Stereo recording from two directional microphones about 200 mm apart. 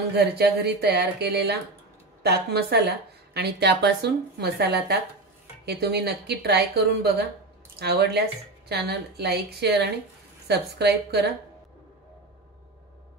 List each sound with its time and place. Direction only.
0.1 s speech: 55° right (ahead or behind)